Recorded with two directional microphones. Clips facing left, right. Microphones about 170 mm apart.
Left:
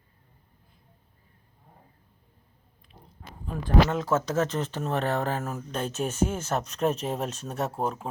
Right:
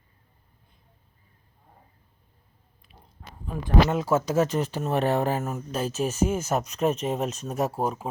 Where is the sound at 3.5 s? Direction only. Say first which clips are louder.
Right 1 dB; 10° right (ahead or behind).